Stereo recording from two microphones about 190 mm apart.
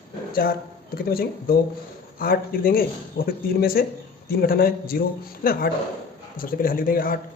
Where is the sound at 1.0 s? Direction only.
50° left (ahead or behind).